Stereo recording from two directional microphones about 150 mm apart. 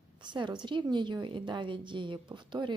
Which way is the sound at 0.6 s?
30° right (ahead or behind).